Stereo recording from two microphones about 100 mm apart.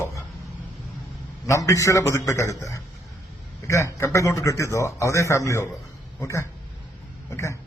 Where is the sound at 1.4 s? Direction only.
30° left (ahead or behind).